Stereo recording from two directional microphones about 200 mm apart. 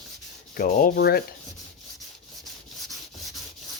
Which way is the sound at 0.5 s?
45° left (ahead or behind).